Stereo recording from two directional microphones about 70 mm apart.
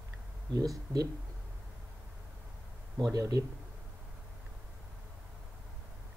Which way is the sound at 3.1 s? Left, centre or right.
Right.